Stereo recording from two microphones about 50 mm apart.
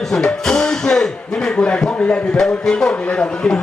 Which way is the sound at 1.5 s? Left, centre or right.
Left.